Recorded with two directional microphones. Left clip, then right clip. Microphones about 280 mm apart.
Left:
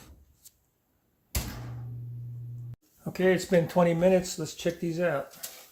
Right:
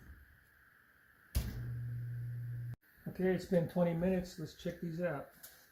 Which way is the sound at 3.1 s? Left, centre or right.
Left.